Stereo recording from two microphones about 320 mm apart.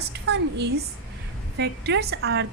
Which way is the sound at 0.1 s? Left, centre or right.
Right.